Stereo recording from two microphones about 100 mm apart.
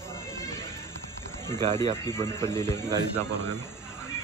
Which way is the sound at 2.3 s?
30° left (ahead or behind).